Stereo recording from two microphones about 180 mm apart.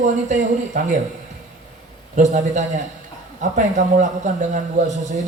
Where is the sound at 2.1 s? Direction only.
40° right (ahead or behind).